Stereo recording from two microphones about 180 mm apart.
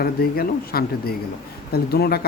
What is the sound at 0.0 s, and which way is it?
Speech, 55° left (ahead or behind).